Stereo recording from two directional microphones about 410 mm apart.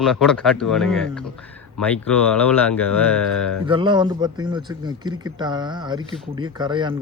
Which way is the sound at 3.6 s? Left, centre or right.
Centre.